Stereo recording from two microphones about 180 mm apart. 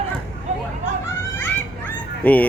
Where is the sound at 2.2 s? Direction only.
10° left (ahead or behind).